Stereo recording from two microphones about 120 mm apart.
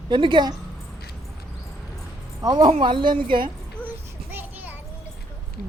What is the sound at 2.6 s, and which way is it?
Speech, 45° right (ahead or behind).